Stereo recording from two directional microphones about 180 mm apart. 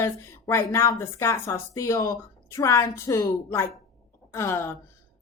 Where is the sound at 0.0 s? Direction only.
15° left (ahead or behind).